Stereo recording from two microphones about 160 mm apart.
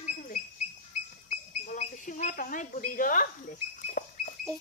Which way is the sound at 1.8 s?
55° left (ahead or behind).